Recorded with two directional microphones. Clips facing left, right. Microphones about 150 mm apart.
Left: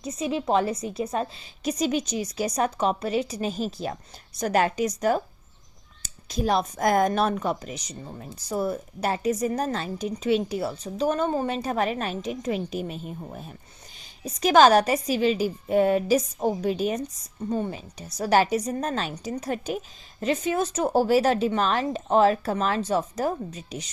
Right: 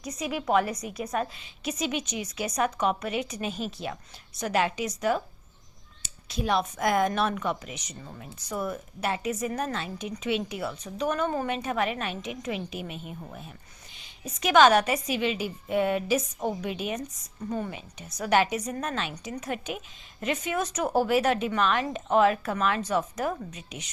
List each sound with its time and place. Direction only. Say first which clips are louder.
0.0 s a woman's voice: left 4 dB; 25° left (ahead or behind)
1.6 s a woman's voice: left 5 dB; 40° left (ahead or behind)